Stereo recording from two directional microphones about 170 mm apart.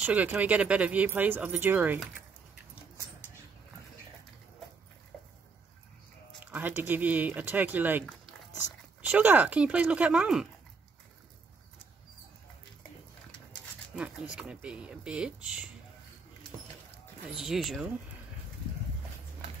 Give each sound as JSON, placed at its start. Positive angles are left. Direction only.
{"t": 0.0, "sound": "speech", "side_deg": -10}
{"t": 6.4, "sound": "speech", "side_deg": -10}
{"t": 9.1, "sound": "speech", "side_deg": -10}
{"t": 13.9, "sound": "speech", "side_deg": -5}
{"t": 17.4, "sound": "speech", "side_deg": 0}